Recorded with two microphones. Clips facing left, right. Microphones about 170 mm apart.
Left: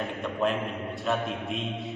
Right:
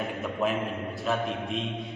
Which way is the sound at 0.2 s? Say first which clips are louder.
Left 1 dB; 5° right (ahead or behind).